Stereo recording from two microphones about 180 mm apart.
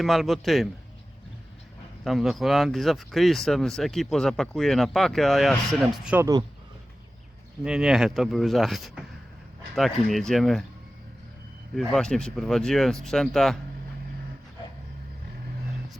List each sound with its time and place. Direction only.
0.0 s speech: centre (ahead or behind)
2.0 s speech: centre (ahead or behind)
6.1 s speech: 20° right (ahead or behind)
7.6 s speech: 5° right (ahead or behind)
11.7 s speech: 5° left (ahead or behind)